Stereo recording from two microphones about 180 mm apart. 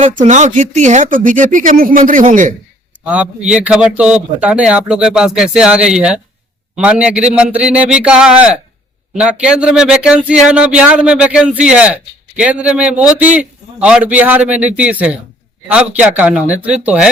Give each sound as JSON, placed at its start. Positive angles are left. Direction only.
{"t": 0.1, "sound": "speech", "side_deg": -45}
{"t": 3.0, "sound": "a man's voice", "side_deg": -5}